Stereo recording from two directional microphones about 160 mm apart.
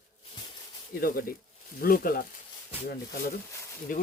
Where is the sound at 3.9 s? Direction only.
55° left (ahead or behind).